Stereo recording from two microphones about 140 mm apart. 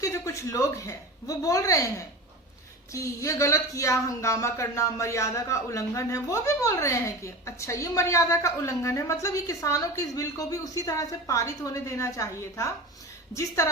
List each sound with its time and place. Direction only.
0.0 s a woman's voice: 20° left (ahead or behind)
2.9 s speech: 20° left (ahead or behind)